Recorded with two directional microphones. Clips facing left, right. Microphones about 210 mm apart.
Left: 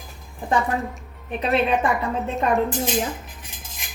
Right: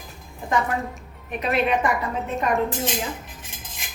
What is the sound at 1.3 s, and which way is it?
Speech, 30° left (ahead or behind).